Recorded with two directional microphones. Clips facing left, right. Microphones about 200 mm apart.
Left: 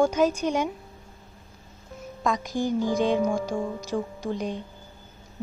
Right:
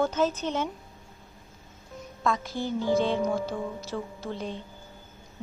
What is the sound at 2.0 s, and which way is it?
Speech, 15° left (ahead or behind).